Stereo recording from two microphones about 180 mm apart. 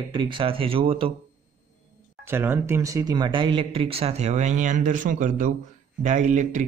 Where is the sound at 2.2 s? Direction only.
10° right (ahead or behind).